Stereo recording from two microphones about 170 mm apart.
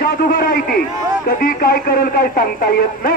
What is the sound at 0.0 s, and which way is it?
A man's voice, 60° left (ahead or behind).